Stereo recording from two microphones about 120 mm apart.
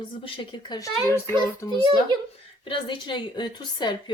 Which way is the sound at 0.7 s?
30° left (ahead or behind).